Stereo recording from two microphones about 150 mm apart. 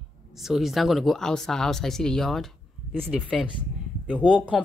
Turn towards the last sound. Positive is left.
turn(degrees=0)  # may be behind; listen again after turning